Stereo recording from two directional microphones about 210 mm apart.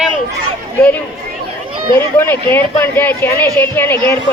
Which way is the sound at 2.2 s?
10° left (ahead or behind).